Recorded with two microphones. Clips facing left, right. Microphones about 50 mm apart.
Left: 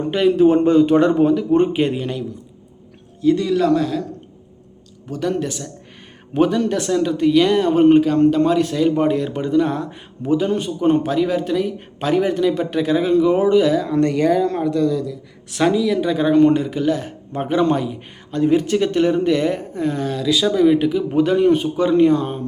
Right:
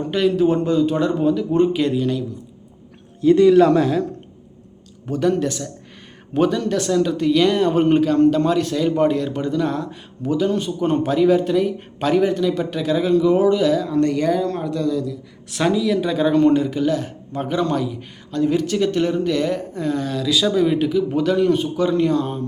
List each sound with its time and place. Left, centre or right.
0.1 s speech: centre
0.6 s speech: left
1.4 s speech: left
3.2 s a man's voice: centre
3.6 s speech: right
5.0 s speech: centre
10.7 s speech: centre